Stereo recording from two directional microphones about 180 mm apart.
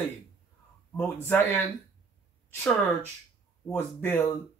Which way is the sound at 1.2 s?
10° left (ahead or behind).